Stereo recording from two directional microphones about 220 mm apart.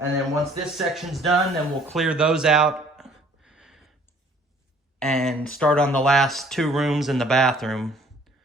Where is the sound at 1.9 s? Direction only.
5° right (ahead or behind).